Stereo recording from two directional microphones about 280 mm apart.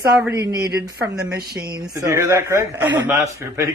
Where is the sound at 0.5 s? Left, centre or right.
Right.